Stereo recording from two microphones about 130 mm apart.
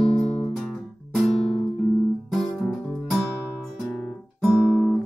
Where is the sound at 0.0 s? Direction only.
45° left (ahead or behind).